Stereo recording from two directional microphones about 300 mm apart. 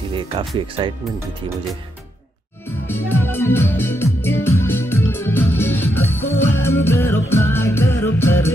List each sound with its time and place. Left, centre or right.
0.1 s speech: centre
2.9 s music: centre